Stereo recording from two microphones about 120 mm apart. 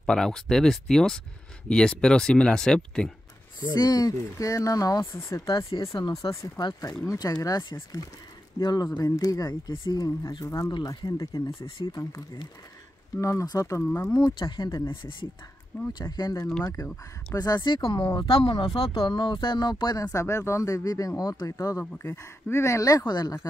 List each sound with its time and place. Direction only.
0.0 s speech: 5° left (ahead or behind)
3.7 s speech: 35° left (ahead or behind)
5.9 s speech: 45° left (ahead or behind)
6.6 s speech: 35° left (ahead or behind); by 14.1 s 20° left (ahead or behind)
14.1 s speech: 35° left (ahead or behind)
14.9 s speech: 40° left (ahead or behind)